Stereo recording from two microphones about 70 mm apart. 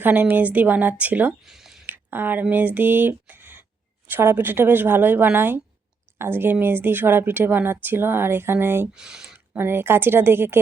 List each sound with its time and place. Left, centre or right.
0.0 s a woman's voice: right
1.5 s a sound: centre
1.9 s a woman's voice: right
9.0 s speech: centre
9.5 s speech: right